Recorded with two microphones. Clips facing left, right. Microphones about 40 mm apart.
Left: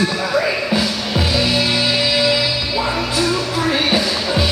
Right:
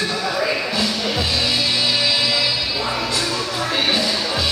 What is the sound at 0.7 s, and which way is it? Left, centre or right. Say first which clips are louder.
Music: left 2 dB; centre.